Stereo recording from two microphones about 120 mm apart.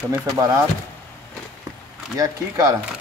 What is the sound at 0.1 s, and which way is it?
Speech, 20° right (ahead or behind).